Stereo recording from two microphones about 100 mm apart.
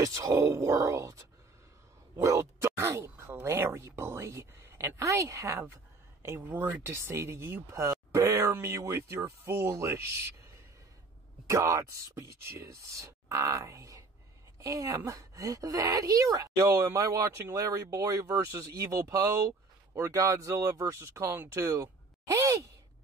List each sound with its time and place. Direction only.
0.0 s speech: 35° right (ahead or behind)
2.2 s speech: 30° right (ahead or behind)
6.2 s speech: 20° right (ahead or behind)